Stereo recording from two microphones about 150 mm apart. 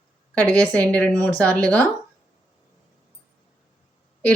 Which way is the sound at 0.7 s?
10° left (ahead or behind).